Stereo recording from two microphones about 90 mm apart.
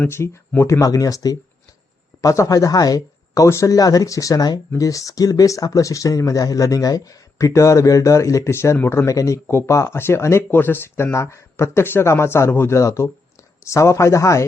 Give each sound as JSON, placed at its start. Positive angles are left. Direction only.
{"t": 0.1, "sound": "speech", "side_deg": 30}